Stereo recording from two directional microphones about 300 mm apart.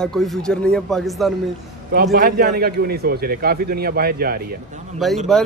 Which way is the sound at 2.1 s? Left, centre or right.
Right.